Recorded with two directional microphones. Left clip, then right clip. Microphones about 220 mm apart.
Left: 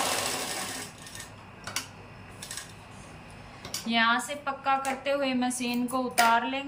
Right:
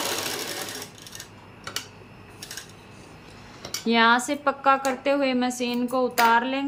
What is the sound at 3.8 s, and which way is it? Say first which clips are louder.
A woman's voice: right 6 dB; 20° right (ahead or behind).